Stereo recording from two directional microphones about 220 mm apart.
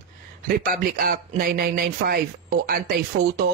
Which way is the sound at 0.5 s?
40° right (ahead or behind).